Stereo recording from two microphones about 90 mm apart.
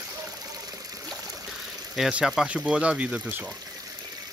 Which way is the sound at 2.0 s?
5° right (ahead or behind).